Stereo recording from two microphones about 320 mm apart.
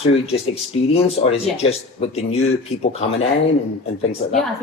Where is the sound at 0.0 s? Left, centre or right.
Centre.